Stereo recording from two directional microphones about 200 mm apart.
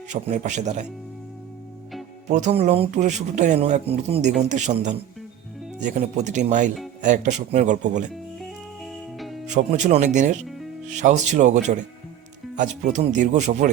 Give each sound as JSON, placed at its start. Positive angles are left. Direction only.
{"t": 0.1, "sound": "speech", "side_deg": -35}
{"t": 2.3, "sound": "speech", "side_deg": -35}
{"t": 9.5, "sound": "speech", "side_deg": -35}